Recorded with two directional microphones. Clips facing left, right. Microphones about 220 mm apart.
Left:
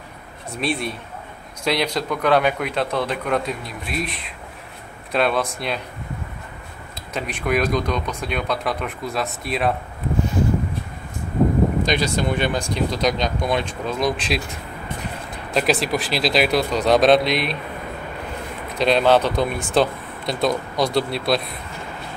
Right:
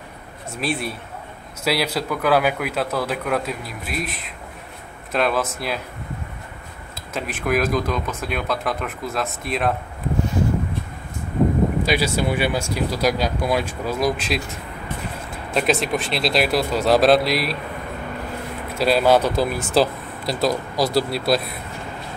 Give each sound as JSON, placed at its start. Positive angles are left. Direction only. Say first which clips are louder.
{"t": 0.6, "sound": "a man's voice", "louder": "left 1 dB", "side_deg": 0}
{"t": 7.2, "sound": "a man's voice", "louder": "even", "side_deg": 0}
{"t": 11.8, "sound": "a man's voice", "louder": "even", "side_deg": -5}
{"t": 15.5, "sound": "a man's voice", "louder": "even", "side_deg": 0}
{"t": 18.8, "sound": "a man's voice", "louder": "even", "side_deg": -5}